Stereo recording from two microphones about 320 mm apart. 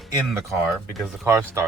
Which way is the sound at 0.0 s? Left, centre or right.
Centre.